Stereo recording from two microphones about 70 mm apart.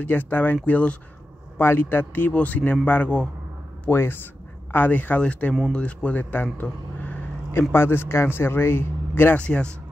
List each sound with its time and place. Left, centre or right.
0.0 s a man's voice: left
1.6 s a man's voice: left
3.9 s a man's voice: left
7.7 s speech: left
9.4 s speech: centre